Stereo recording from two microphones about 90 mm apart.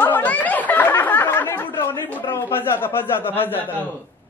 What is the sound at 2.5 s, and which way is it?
Speech, 25° left (ahead or behind).